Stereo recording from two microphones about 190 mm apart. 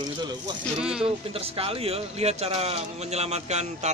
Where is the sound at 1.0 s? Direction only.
30° right (ahead or behind).